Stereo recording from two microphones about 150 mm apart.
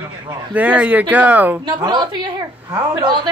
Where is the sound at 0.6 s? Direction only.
10° right (ahead or behind).